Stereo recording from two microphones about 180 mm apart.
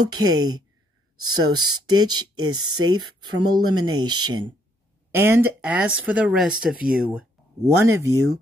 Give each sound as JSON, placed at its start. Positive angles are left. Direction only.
{"t": 0.0, "sound": "speech", "side_deg": -20}
{"t": 5.1, "sound": "speech", "side_deg": -15}
{"t": 7.6, "sound": "speech", "side_deg": -15}